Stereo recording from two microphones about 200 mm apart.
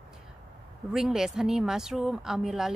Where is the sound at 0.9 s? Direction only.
Centre (ahead or behind).